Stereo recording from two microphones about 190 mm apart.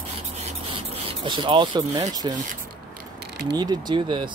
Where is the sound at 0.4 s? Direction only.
30° right (ahead or behind).